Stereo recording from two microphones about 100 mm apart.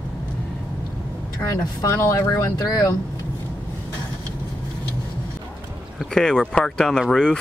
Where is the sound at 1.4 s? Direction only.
30° left (ahead or behind).